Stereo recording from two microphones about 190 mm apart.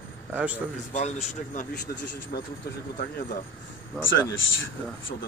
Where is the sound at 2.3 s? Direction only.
55° left (ahead or behind).